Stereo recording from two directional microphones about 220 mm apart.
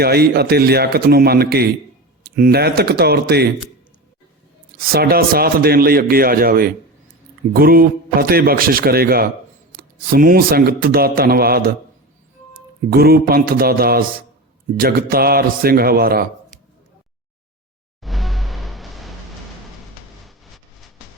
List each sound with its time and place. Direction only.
0.0 s a man's voice: 45° right (ahead or behind)
4.8 s a man's voice: 45° right (ahead or behind)
12.9 s a man's voice: 45° right (ahead or behind)
18.0 s music: centre (ahead or behind)
20.2 s vehicle: centre (ahead or behind)